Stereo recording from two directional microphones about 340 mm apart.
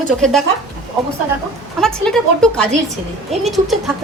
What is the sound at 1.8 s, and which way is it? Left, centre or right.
Speech, centre.